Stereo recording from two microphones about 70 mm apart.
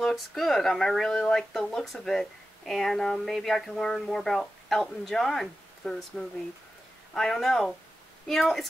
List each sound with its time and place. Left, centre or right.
0.0 s speech: centre